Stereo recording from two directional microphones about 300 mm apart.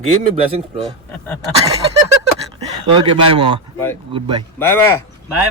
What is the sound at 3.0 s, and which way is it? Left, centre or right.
Speech, centre.